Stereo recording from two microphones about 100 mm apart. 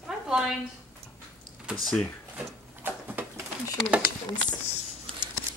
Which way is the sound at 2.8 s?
20° right (ahead or behind).